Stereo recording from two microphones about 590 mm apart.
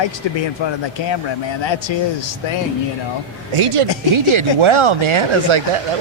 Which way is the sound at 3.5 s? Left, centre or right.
Right.